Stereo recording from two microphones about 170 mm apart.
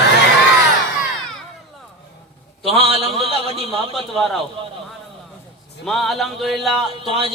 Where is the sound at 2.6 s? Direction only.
35° right (ahead or behind).